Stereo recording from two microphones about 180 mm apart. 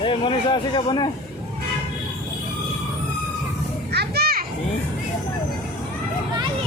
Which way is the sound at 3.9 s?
65° right (ahead or behind).